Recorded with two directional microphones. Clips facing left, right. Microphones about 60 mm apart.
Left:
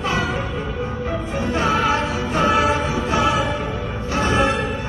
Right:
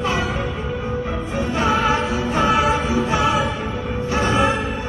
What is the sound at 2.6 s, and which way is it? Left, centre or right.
Music, right.